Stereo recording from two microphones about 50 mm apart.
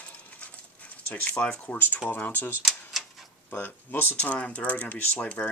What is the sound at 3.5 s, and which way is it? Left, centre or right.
Speech, left.